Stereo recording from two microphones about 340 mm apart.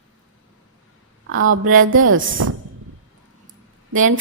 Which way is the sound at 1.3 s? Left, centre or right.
Right.